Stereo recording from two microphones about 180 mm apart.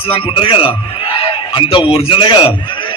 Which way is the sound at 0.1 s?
30° left (ahead or behind).